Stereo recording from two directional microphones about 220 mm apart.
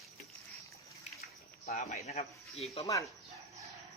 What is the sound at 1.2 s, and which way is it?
Cricket, 35° left (ahead or behind).